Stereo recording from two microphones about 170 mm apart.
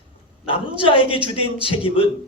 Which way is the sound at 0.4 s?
30° left (ahead or behind).